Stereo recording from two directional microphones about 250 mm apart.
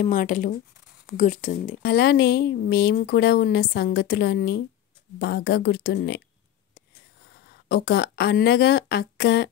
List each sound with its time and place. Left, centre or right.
0.0 s a woman's voice: left
7.4 s a woman's voice: left